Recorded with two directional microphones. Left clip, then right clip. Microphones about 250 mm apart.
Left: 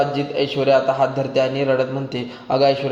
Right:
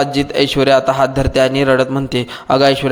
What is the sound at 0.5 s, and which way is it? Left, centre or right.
A man's voice, right.